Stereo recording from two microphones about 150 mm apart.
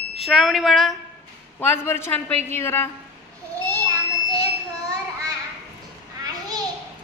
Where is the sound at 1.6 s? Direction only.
15° left (ahead or behind).